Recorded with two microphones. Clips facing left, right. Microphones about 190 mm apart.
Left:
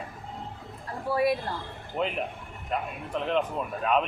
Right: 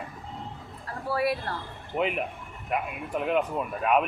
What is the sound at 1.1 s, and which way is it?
Speech, 20° left (ahead or behind).